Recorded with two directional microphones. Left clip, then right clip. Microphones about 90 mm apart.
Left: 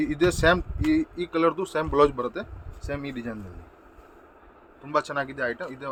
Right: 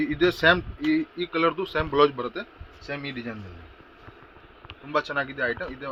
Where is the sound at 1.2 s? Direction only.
65° left (ahead or behind); by 2.1 s 90° left.